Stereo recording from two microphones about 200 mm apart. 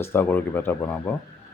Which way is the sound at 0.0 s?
10° left (ahead or behind).